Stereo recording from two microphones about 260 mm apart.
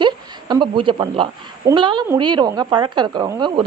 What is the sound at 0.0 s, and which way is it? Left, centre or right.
A woman's voice, centre.